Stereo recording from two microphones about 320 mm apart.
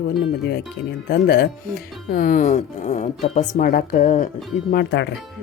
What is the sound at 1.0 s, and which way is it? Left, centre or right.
Speech, left.